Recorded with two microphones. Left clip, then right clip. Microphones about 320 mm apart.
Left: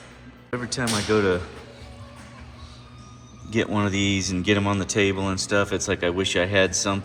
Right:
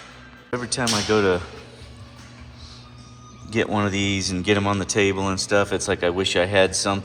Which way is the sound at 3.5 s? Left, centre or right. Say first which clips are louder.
Right 2 dB; centre.